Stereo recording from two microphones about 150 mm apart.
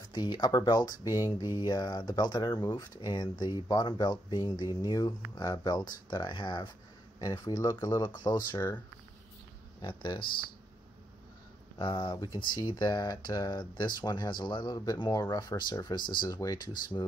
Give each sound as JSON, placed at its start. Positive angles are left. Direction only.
{"t": 0.1, "sound": "speech", "side_deg": 30}
{"t": 8.5, "sound": "speech", "side_deg": 15}
{"t": 9.8, "sound": "speech", "side_deg": 35}
{"t": 11.8, "sound": "speech", "side_deg": 30}